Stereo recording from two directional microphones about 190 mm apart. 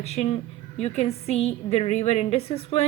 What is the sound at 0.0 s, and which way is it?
Speech, 35° left (ahead or behind).